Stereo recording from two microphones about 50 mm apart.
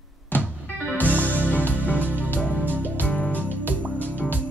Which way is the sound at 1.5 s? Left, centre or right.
Left.